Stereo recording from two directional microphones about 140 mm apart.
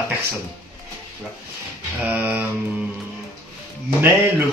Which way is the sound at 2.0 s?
10° right (ahead or behind).